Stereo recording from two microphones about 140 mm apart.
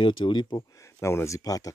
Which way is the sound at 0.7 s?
20° left (ahead or behind).